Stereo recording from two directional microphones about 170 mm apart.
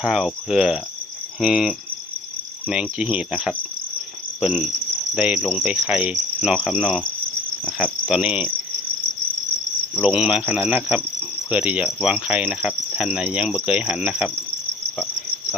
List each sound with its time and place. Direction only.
0.0 s speech: 5° right (ahead or behind)
4.4 s insect: 5° right (ahead or behind)
5.1 s cricket: 10° right (ahead or behind)
8.0 s cricket: 5° right (ahead or behind)
10.0 s cricket: 5° right (ahead or behind)